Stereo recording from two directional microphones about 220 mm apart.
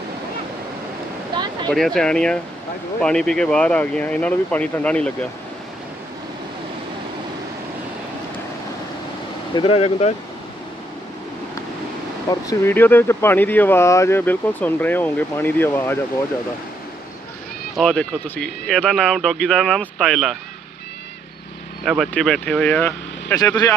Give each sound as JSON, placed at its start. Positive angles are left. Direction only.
{"t": 1.7, "sound": "speech", "side_deg": 0}
{"t": 9.6, "sound": "speech", "side_deg": 25}
{"t": 12.3, "sound": "speech", "side_deg": 15}
{"t": 17.7, "sound": "speech", "side_deg": 5}
{"t": 21.8, "sound": "speech", "side_deg": 0}